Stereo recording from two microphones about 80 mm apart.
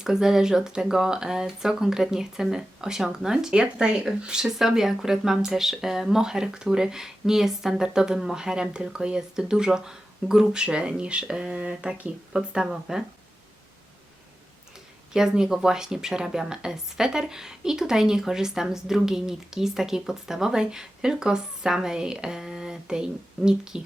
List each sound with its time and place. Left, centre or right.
0.0 s speech: centre
15.1 s speech: centre